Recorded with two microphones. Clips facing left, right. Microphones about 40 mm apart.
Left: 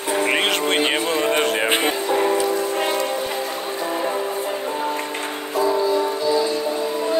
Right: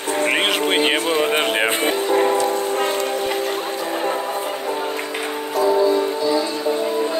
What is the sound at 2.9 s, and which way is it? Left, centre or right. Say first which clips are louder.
Music: right 1 dB; right.